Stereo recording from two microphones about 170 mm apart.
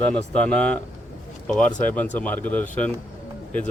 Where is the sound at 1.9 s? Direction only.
10° left (ahead or behind).